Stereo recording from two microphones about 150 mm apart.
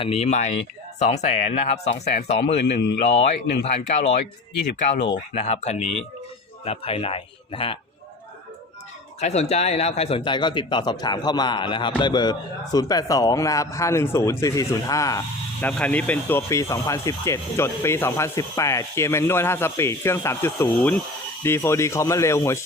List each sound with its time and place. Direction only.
0.0 s speech: 45° left (ahead or behind)
5.3 s a man's voice: 50° left (ahead or behind)
9.2 s a man's voice: 45° left (ahead or behind); by 15.2 s 25° left (ahead or behind)
15.6 s a man's voice: 10° left (ahead or behind)